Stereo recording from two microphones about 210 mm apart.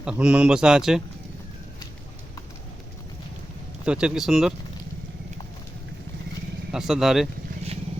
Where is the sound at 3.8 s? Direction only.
5° right (ahead or behind).